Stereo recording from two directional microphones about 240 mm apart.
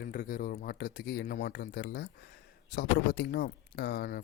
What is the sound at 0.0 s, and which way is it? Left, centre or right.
Speech, left.